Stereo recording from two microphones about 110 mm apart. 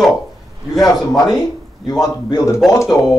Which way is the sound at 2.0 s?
35° left (ahead or behind).